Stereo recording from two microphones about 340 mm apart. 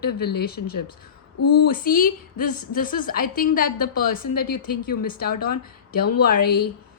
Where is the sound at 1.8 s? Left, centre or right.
Left.